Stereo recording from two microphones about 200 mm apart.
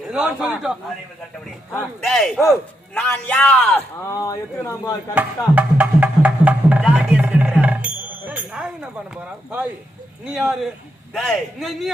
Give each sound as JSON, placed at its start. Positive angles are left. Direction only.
{"t": 0.1, "sound": "speech", "side_deg": -5}
{"t": 4.1, "sound": "speech", "side_deg": 15}
{"t": 5.5, "sound": "music", "side_deg": -5}
{"t": 8.3, "sound": "chink", "side_deg": -5}
{"t": 10.2, "sound": "speech", "side_deg": 0}